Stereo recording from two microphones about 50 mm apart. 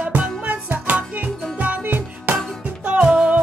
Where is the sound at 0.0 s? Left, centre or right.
Right.